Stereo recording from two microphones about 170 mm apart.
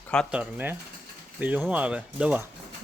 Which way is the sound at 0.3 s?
10° right (ahead or behind).